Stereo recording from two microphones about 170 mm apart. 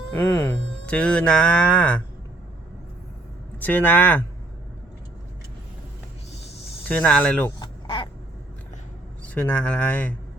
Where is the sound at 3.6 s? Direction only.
10° left (ahead or behind).